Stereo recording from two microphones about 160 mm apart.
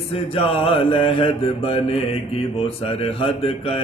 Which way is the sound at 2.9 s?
35° left (ahead or behind).